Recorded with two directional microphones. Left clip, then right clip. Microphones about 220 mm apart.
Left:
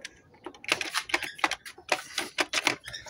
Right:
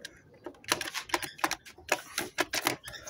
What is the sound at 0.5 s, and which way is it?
Typing, 35° right (ahead or behind).